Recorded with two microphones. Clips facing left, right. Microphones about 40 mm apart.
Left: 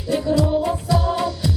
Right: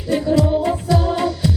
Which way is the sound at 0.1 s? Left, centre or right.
Right.